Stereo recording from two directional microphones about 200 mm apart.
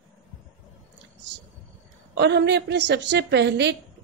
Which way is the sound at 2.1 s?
60° right (ahead or behind).